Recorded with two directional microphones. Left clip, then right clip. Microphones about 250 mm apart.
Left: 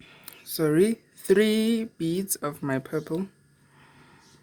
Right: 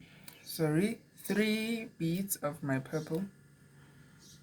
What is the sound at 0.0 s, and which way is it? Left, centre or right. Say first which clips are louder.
Speech: left 6 dB; left.